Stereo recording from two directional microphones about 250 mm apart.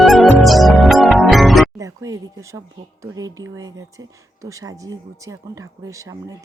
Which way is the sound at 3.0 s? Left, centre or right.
Centre.